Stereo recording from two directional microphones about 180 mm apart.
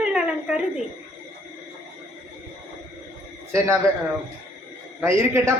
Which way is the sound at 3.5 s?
15° right (ahead or behind).